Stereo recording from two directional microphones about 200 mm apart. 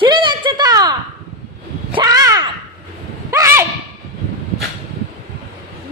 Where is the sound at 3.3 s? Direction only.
15° right (ahead or behind).